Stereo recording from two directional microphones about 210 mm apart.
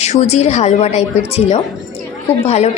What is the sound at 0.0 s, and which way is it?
A woman's voice, 30° left (ahead or behind).